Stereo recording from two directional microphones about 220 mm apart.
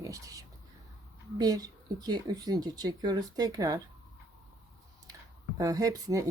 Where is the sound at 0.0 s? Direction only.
15° right (ahead or behind).